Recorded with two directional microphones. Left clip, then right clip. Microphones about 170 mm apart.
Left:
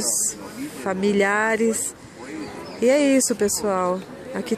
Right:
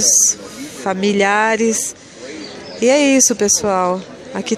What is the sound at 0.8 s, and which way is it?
Speech, 10° right (ahead or behind).